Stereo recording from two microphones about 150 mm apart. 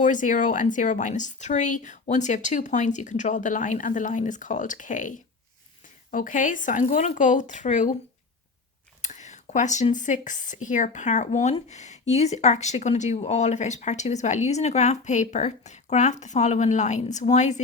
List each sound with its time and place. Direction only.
0.0 s speech: 60° left (ahead or behind)
9.0 s speech: 50° left (ahead or behind)